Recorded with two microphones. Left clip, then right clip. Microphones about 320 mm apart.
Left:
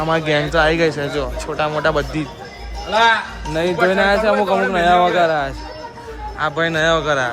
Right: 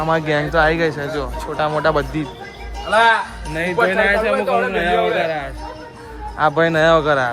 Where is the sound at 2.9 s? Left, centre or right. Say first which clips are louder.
Right 1 dB; right.